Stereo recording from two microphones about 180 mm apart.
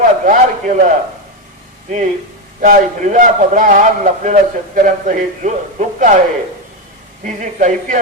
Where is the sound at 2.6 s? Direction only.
45° right (ahead or behind).